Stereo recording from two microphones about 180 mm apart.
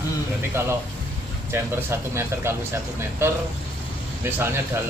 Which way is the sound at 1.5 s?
15° right (ahead or behind).